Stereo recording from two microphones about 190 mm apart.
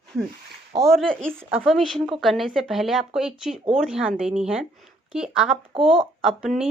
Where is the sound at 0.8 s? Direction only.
5° left (ahead or behind).